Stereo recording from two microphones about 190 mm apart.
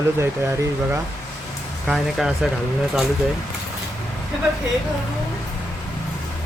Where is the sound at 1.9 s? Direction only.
Centre (ahead or behind).